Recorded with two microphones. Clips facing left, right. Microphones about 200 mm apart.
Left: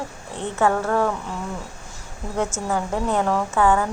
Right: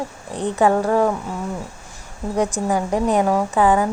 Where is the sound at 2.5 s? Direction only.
15° right (ahead or behind).